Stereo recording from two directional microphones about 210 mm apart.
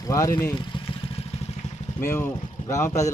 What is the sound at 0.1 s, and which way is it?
Speech, 15° left (ahead or behind).